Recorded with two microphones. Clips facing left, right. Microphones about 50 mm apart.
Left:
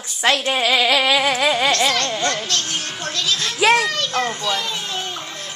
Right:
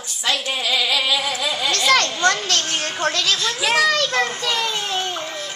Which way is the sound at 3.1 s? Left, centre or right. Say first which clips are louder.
Left 3 dB; right.